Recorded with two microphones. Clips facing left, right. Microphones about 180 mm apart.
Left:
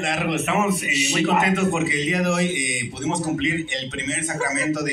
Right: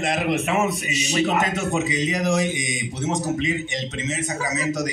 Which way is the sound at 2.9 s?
40° right (ahead or behind).